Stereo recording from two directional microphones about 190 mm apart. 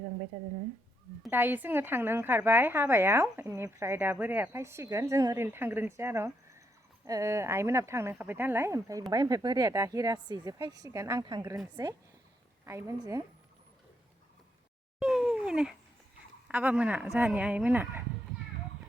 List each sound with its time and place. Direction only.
1.3 s a woman's voice: 10° right (ahead or behind)
14.9 s a sound: 5° right (ahead or behind)
16.5 s a woman's voice: 10° right (ahead or behind)